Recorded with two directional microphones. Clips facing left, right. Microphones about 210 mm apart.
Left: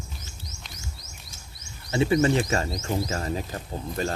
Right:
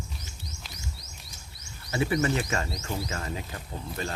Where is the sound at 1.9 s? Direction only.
25° left (ahead or behind).